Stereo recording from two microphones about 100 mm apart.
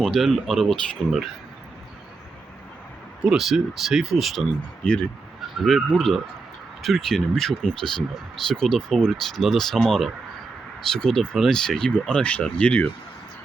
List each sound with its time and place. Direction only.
0.0 s speech: centre (ahead or behind)
3.2 s speech: centre (ahead or behind)
4.8 s speech: 10° left (ahead or behind)